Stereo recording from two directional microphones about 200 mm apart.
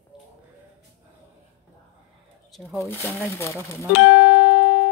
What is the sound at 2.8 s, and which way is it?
Speech, 10° left (ahead or behind).